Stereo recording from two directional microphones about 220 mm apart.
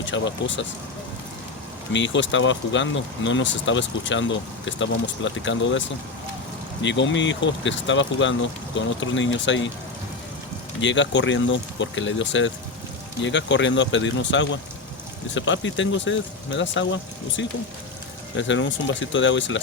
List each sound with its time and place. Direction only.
0.0 s speech: 55° left (ahead or behind)
1.9 s speech: 55° left (ahead or behind)
6.8 s speech: 55° left (ahead or behind)
10.8 s speech: 55° left (ahead or behind)